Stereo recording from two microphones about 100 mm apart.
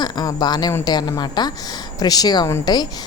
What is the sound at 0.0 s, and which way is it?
A woman's voice, 40° left (ahead or behind).